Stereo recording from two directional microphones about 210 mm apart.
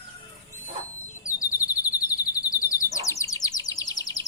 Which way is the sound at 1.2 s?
15° left (ahead or behind).